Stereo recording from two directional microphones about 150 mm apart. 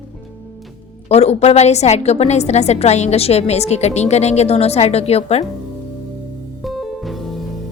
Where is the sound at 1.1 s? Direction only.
45° left (ahead or behind).